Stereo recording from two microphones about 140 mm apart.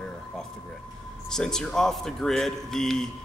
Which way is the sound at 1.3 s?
5° left (ahead or behind).